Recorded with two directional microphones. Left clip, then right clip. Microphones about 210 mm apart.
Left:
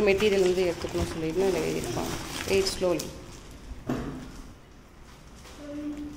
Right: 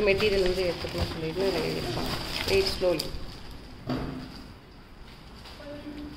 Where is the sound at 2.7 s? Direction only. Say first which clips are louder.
Right 1 dB; 20° left (ahead or behind).